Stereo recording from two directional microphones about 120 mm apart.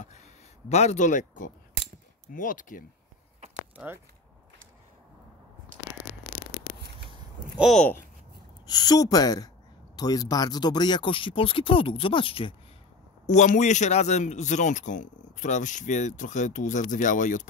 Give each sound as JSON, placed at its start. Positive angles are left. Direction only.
{"t": 0.0, "sound": "speech", "side_deg": 70}
{"t": 3.7, "sound": "speech", "side_deg": -15}
{"t": 8.6, "sound": "speech", "side_deg": 35}
{"t": 13.3, "sound": "a man's voice", "side_deg": 80}